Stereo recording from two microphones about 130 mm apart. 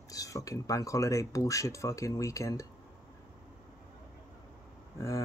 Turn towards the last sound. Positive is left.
turn(degrees=25)  # may be behind; listen again after turning